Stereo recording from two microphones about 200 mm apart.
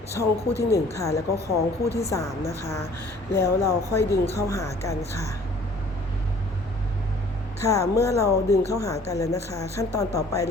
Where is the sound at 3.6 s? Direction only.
15° left (ahead or behind).